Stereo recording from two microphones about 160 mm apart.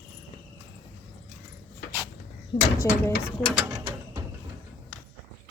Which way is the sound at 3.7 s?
15° right (ahead or behind).